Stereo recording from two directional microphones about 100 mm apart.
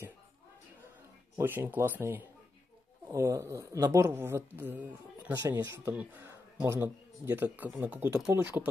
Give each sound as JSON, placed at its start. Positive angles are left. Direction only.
{"t": 1.4, "sound": "a woman's voice", "side_deg": -20}